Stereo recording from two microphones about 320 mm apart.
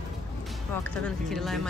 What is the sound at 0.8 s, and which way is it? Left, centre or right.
Speech, centre.